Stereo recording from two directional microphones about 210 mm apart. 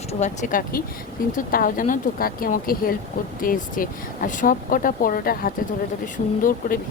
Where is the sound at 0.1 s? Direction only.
35° left (ahead or behind).